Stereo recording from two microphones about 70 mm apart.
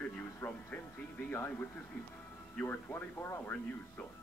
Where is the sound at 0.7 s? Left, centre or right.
Left.